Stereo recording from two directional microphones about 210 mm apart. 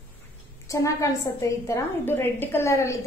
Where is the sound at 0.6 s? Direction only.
15° left (ahead or behind).